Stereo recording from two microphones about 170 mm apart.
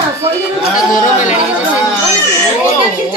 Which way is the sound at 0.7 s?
50° left (ahead or behind).